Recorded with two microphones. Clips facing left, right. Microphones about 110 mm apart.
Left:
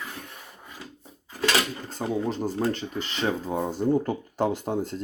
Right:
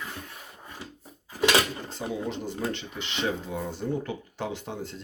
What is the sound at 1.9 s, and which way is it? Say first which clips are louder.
Speech: left 4 dB; 40° left (ahead or behind).